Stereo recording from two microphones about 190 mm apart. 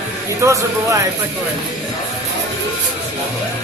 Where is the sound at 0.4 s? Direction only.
15° right (ahead or behind).